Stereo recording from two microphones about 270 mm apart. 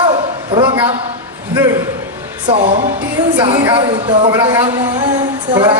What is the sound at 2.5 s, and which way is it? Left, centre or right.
A woman's voice, right.